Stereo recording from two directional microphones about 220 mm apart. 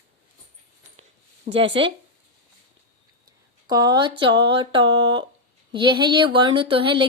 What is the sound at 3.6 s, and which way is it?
Speech, 20° right (ahead or behind).